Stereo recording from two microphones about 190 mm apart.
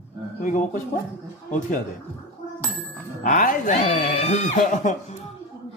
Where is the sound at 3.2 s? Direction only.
45° left (ahead or behind).